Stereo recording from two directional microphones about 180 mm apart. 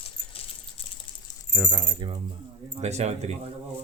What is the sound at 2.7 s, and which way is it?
Speech, 40° right (ahead or behind).